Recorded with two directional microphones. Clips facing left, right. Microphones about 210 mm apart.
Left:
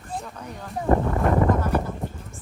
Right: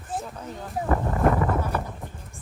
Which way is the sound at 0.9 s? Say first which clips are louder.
Left 5 dB; 25° left (ahead or behind).